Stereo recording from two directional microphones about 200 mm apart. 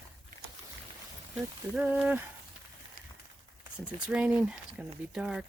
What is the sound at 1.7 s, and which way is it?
Speech, 10° right (ahead or behind).